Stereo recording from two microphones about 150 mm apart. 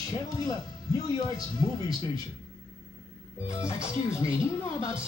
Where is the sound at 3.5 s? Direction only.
20° left (ahead or behind).